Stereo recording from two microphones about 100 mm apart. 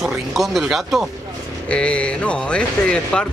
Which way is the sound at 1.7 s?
10° left (ahead or behind).